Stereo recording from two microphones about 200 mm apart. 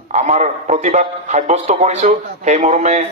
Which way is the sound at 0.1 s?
35° right (ahead or behind).